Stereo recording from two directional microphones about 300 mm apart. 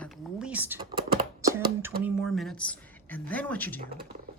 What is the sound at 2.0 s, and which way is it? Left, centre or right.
Speech, centre.